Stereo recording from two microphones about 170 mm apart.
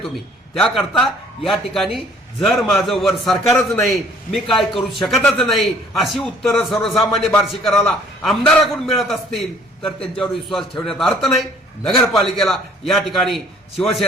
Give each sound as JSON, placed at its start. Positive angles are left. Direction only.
{"t": 0.6, "sound": "a man's voice", "side_deg": 5}